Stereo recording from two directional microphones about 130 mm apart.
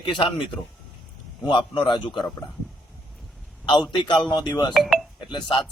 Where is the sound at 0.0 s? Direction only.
40° left (ahead or behind).